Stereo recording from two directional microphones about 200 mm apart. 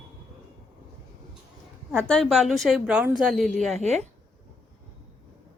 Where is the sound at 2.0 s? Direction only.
5° left (ahead or behind).